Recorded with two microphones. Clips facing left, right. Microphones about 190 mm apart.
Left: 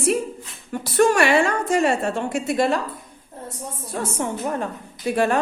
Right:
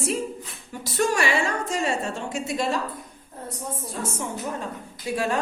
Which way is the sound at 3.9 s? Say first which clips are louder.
Left 8 dB; 65° left (ahead or behind).